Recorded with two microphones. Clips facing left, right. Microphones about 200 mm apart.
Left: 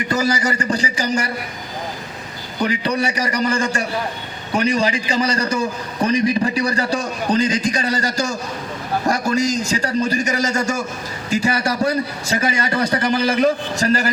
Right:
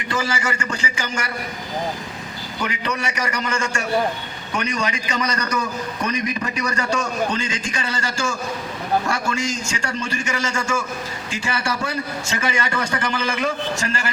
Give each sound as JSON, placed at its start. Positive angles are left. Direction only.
{"t": 0.1, "sound": "a man's voice", "side_deg": 40}
{"t": 2.6, "sound": "a man's voice", "side_deg": 35}